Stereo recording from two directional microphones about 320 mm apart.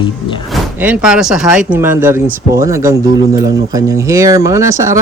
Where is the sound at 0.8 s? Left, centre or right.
Centre.